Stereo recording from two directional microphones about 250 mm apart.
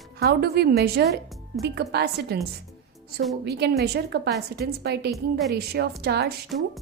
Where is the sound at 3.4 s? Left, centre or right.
Right.